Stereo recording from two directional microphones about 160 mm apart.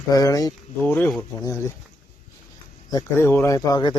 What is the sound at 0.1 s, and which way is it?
Speech, 20° left (ahead or behind).